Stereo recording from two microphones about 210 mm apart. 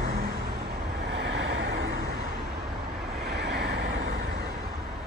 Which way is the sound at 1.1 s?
60° right (ahead or behind).